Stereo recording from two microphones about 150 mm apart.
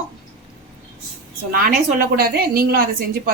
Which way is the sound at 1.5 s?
75° right (ahead or behind).